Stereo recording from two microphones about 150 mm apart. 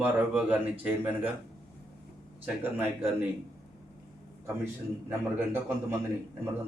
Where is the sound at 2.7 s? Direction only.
15° right (ahead or behind).